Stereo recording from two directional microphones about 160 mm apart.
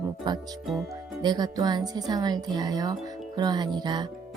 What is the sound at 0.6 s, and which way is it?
Speech, centre (ahead or behind).